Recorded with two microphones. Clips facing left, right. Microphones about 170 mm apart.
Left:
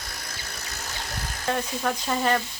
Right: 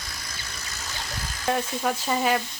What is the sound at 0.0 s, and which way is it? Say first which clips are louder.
Vehicle: left 1 dB; 60° left (ahead or behind).